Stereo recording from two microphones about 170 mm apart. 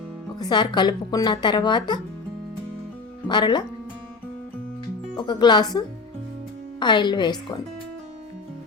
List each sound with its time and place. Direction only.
0.3 s speech: 25° left (ahead or behind)
3.2 s speech: 25° left (ahead or behind)
5.1 s speech: 25° left (ahead or behind)